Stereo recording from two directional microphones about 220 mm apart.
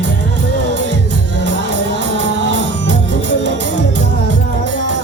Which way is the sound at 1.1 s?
55° right (ahead or behind).